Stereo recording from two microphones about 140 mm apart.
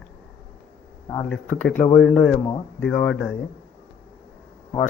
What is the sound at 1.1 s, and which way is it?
Speech, 10° left (ahead or behind).